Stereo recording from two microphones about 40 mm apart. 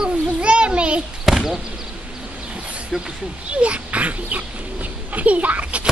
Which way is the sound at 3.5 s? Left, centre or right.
Right.